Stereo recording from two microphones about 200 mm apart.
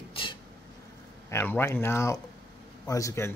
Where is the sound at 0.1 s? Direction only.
25° left (ahead or behind).